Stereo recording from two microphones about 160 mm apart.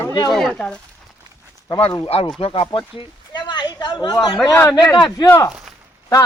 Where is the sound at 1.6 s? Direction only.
30° left (ahead or behind).